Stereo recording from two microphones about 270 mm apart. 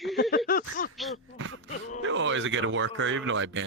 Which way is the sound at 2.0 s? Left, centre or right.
Right.